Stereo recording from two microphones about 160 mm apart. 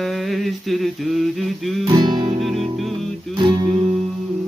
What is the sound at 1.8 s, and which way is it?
Music, 30° right (ahead or behind).